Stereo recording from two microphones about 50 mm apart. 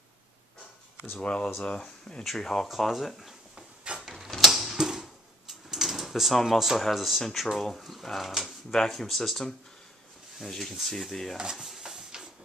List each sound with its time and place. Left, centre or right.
1.2 s speech: centre
2.7 s speech: centre
4.0 s mechanisms: centre
5.5 s drawer open or close: centre
6.8 s speech: centre
11.5 s drawer open or close: centre